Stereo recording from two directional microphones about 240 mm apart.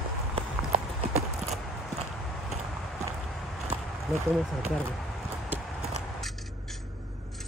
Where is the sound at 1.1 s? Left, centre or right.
Right.